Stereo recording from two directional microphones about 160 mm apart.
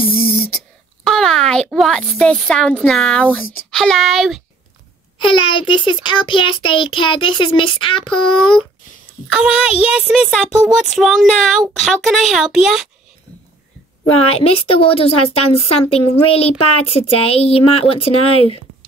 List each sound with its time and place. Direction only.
0.0 s beatboxing: 70° left (ahead or behind)
1.0 s a woman's voice: 5° left (ahead or behind)
5.2 s speech: 30° left (ahead or behind)
9.3 s a child's voice: 5° right (ahead or behind)
14.4 s speech: 35° left (ahead or behind)